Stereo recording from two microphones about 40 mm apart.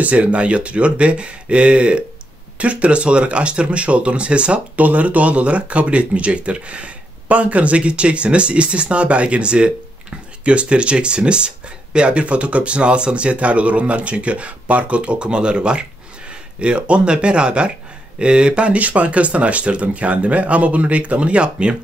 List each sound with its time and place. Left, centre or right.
0.0 s speech: right
4.7 s speech: right